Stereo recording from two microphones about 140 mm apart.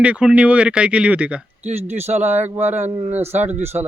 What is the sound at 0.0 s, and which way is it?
Speech, 10° right (ahead or behind).